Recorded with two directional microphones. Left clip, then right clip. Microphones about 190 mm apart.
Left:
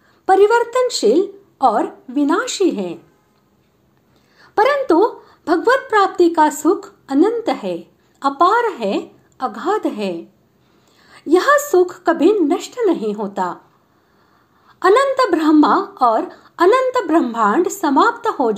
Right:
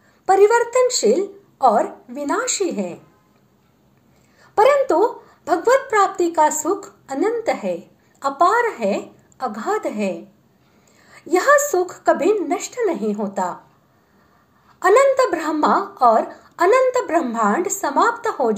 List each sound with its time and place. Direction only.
0.2 s a sound: 30° left (ahead or behind)
0.7 s speech: 30° left (ahead or behind)
4.4 s a woman's voice: 25° left (ahead or behind)
14.8 s speech: 25° left (ahead or behind)